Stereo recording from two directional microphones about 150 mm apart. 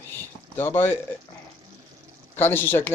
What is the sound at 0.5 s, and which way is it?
Speech, 15° left (ahead or behind).